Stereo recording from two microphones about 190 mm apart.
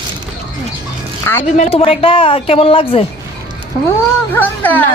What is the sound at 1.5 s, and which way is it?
A woman's voice, 35° left (ahead or behind).